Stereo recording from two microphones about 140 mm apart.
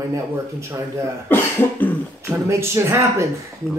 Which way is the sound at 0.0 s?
20° right (ahead or behind).